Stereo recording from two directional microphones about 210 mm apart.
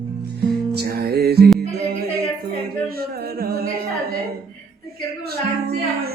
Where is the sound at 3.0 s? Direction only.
45° right (ahead or behind).